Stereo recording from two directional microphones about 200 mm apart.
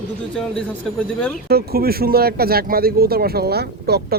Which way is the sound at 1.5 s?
50° right (ahead or behind).